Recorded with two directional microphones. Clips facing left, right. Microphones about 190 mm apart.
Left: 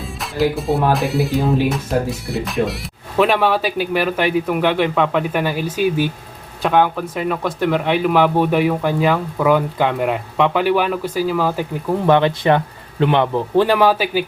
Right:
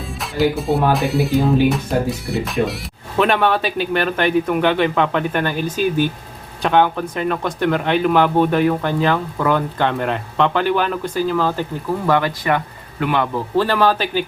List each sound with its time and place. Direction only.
0.2 s speech: centre (ahead or behind)
12.0 s speech: 25° left (ahead or behind)